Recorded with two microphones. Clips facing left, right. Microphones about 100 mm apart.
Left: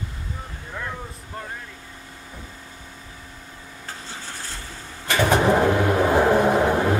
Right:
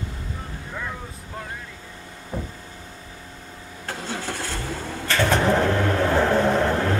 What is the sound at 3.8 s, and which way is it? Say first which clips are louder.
Vehicle: right 7 dB; 75° right (ahead or behind).